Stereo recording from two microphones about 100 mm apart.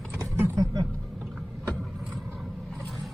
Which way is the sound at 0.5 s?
40° right (ahead or behind).